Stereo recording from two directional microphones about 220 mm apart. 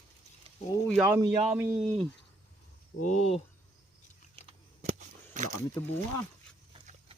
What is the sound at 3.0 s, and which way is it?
Speech, 35° left (ahead or behind).